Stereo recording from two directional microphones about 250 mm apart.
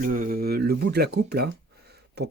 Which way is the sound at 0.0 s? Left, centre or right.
Right.